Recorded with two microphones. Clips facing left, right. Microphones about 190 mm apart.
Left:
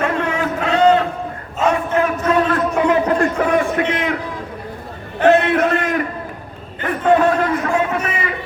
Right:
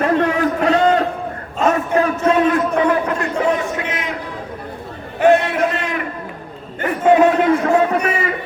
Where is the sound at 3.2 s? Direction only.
60° left (ahead or behind).